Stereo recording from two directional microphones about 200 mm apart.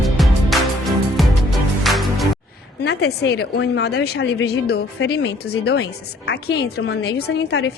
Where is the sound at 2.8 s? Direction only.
55° left (ahead or behind).